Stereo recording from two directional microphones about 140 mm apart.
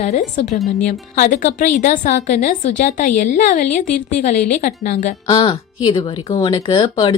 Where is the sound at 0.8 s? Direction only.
70° left (ahead or behind).